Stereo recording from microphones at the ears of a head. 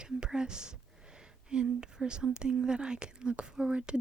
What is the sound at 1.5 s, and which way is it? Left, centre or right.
Speech, right.